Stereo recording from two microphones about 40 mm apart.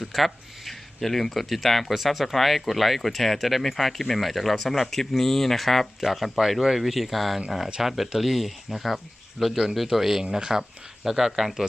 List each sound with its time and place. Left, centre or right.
0.0 s speech: centre
4.9 s speech: centre
9.4 s speech: right
9.7 s speech: centre